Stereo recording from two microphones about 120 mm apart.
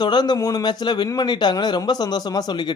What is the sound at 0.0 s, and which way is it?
A man's voice, 35° left (ahead or behind).